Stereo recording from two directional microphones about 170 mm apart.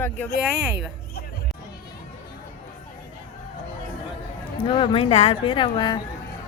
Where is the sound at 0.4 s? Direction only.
5° right (ahead or behind).